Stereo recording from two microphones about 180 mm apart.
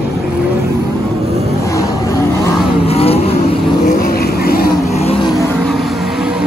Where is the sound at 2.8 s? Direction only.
35° left (ahead or behind).